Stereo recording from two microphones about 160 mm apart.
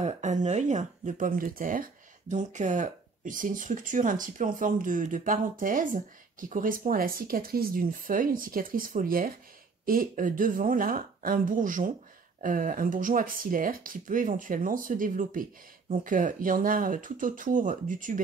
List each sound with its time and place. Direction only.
0.0 s speech: 50° right (ahead or behind)